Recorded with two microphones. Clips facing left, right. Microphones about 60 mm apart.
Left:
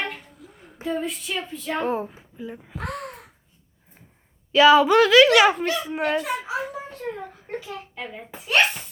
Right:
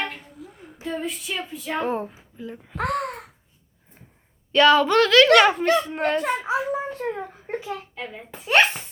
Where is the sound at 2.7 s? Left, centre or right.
Right.